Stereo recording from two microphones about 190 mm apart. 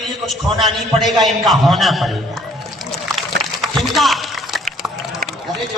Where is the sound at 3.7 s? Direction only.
Centre (ahead or behind).